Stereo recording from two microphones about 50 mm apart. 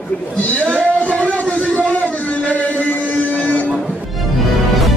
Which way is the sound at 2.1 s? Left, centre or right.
Left.